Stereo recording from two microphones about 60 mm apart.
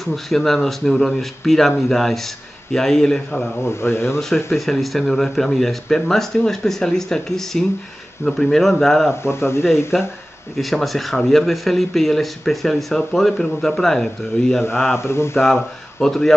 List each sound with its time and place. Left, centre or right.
0.0 s a man's voice: centre
3.6 s speech: left
4.5 s speech: centre
9.2 s speech: left
9.9 s speech: centre
15.0 s speech: left
15.3 s speech: centre
16.0 s a man's voice: centre